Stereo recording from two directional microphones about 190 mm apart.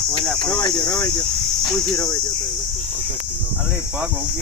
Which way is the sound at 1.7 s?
20° left (ahead or behind).